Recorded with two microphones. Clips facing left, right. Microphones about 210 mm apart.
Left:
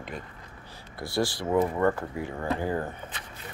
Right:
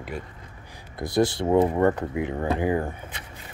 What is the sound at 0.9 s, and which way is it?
Speech, 20° right (ahead or behind).